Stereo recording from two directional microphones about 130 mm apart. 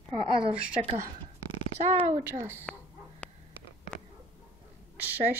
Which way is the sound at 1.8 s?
70° right (ahead or behind).